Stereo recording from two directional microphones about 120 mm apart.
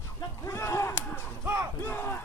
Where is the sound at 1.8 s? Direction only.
20° left (ahead or behind).